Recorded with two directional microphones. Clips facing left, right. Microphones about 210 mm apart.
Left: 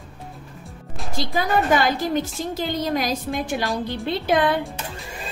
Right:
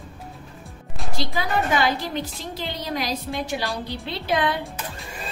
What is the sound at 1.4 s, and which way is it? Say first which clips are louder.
A woman's voice: left 4 dB; 50° left (ahead or behind).